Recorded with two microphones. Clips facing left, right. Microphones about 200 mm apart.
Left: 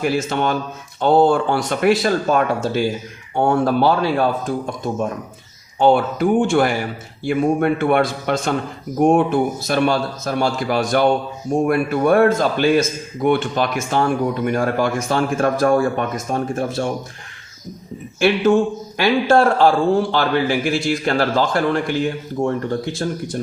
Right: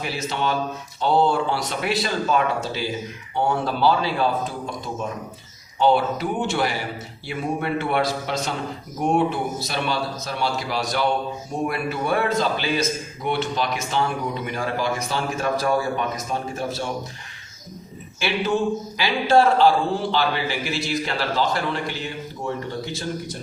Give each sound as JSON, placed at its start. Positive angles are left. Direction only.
{"t": 0.0, "sound": "a man's voice", "side_deg": 50}
{"t": 18.2, "sound": "a man's voice", "side_deg": 50}